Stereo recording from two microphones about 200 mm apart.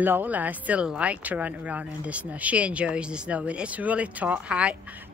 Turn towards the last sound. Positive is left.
turn(degrees=-5)  # may be behind; listen again after turning